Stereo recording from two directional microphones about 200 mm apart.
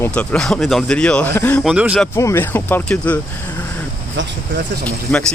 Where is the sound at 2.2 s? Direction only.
15° left (ahead or behind).